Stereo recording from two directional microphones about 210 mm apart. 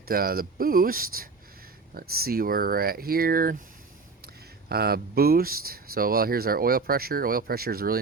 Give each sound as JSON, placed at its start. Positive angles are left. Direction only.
{"t": 0.1, "sound": "speech", "side_deg": -45}
{"t": 4.7, "sound": "speech", "side_deg": -45}